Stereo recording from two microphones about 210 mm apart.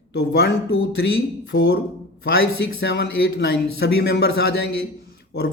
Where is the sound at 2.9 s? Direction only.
50° left (ahead or behind).